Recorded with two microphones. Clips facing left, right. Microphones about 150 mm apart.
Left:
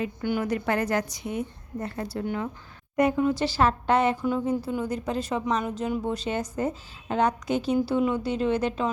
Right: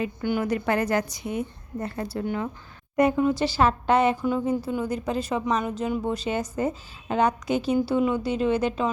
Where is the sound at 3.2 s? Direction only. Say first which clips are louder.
Right 1 dB; 15° right (ahead or behind).